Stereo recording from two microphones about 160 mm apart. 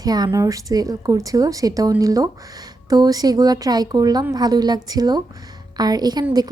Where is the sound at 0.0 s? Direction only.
25° right (ahead or behind).